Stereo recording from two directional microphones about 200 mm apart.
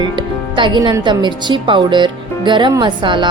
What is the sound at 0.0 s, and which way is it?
Speech, 25° right (ahead or behind).